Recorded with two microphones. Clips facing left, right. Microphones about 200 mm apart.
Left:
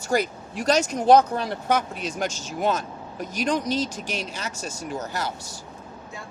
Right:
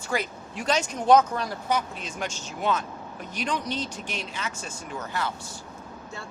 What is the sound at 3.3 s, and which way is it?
Speech, 40° left (ahead or behind).